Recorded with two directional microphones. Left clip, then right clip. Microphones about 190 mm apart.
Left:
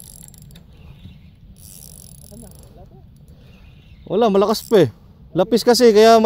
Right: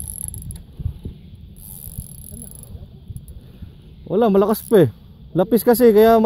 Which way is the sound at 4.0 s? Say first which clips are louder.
Left 1 dB; centre (ahead or behind).